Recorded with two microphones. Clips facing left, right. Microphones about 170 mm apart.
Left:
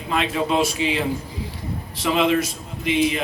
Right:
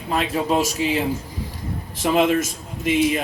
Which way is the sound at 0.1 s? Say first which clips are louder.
Right 1 dB; 40° right (ahead or behind).